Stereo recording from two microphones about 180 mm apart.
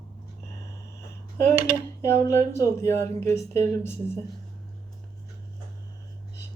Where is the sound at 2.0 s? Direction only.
15° left (ahead or behind).